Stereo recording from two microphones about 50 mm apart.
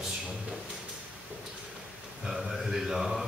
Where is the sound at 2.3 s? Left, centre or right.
Centre.